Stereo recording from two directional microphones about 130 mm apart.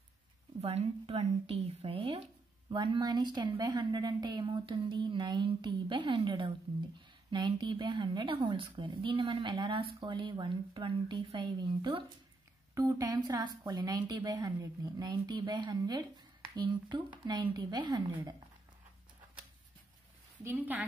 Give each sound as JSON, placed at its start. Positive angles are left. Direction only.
{"t": 0.6, "sound": "speech", "side_deg": -55}
{"t": 2.7, "sound": "a woman's voice", "side_deg": -40}
{"t": 12.7, "sound": "a woman's voice", "side_deg": -25}
{"t": 20.4, "sound": "speech", "side_deg": -15}